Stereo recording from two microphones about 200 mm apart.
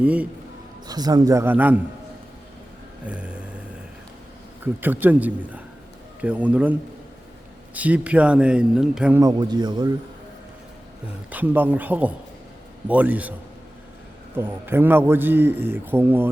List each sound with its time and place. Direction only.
0.0 s a man's voice: 5° right (ahead or behind)
0.9 s a man's voice: 20° right (ahead or behind)
3.1 s a sound: 5° right (ahead or behind)
4.6 s a man's voice: 10° right (ahead or behind)
9.2 s speech: 20° right (ahead or behind)
11.3 s a man's voice: 10° right (ahead or behind)
14.3 s a man's voice: 10° right (ahead or behind)